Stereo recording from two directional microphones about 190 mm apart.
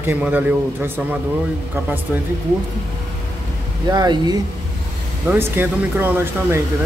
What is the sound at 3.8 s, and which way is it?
Speech, 20° right (ahead or behind).